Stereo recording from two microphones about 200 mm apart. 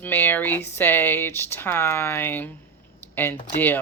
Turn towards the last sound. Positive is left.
turn(degrees=10)  # may be behind; listen again after turning